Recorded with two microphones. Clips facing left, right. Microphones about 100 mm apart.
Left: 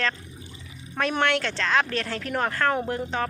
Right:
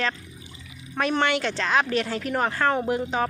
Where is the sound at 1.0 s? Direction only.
5° right (ahead or behind).